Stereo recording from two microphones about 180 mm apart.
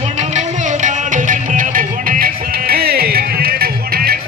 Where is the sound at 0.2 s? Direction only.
40° right (ahead or behind).